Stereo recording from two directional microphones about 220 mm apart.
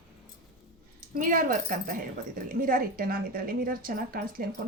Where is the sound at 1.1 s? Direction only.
40° right (ahead or behind).